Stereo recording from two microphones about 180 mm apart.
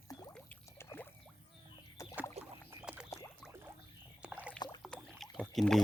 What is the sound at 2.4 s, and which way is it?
Rowboat, 35° right (ahead or behind).